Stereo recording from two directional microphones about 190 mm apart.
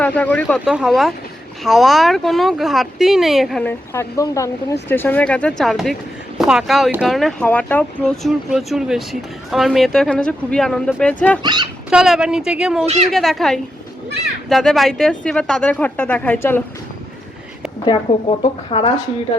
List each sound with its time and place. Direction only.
0.0 s speech: 10° left (ahead or behind)
0.6 s speech: 5° right (ahead or behind)
3.7 s speech: 15° left (ahead or behind)
11.4 s speech: 20° right (ahead or behind)
11.9 s speech: 5° right (ahead or behind)
12.8 s speech: 35° right (ahead or behind)
13.1 s speech: centre (ahead or behind)
17.8 s speech: 30° left (ahead or behind)